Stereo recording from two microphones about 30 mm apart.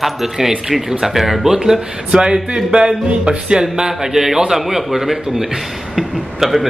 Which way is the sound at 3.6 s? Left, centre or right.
Centre.